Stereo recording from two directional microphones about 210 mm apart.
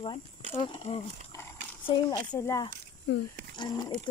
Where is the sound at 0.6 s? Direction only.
25° left (ahead or behind).